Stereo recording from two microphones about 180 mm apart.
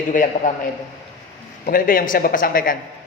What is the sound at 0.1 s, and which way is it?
A man's voice, 45° left (ahead or behind).